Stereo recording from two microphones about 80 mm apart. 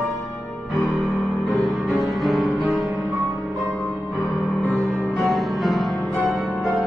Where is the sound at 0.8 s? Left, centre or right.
Left.